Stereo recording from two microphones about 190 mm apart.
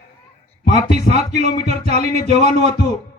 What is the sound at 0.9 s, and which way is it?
Speech, 55° left (ahead or behind).